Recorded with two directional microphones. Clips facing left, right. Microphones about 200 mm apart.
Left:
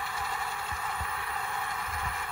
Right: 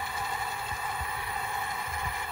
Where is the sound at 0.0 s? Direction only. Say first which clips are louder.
Right 1 dB; 20° right (ahead or behind).